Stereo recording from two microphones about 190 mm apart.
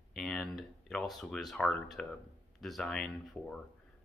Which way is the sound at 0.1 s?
Centre (ahead or behind).